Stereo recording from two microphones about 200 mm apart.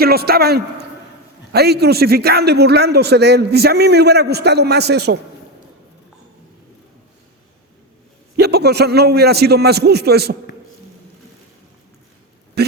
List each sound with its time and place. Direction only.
0.0 s a man's voice: 50° right (ahead or behind)
8.4 s a man's voice: 55° right (ahead or behind)
12.6 s speech: 55° right (ahead or behind)